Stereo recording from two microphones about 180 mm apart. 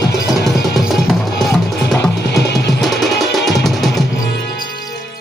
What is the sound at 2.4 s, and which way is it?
Music, 70° left (ahead or behind).